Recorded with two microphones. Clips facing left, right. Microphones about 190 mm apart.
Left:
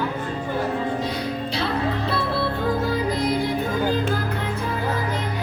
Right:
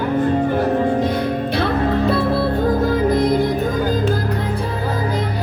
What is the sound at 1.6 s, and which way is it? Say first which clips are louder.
Music: right 7 dB; 45° right (ahead or behind).